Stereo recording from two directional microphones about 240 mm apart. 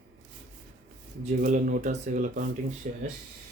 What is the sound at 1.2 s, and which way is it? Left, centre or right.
Speech, right.